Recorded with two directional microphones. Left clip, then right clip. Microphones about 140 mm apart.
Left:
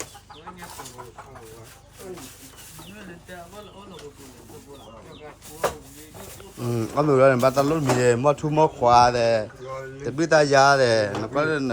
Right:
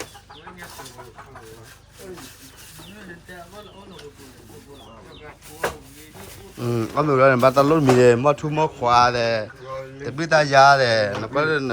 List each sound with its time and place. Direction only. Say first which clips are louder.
5.2 s a man's voice: even; 5° left (ahead or behind)
7.8 s speech: right 5 dB; centre (ahead or behind)
8.3 s speech: left 1 dB; 25° left (ahead or behind)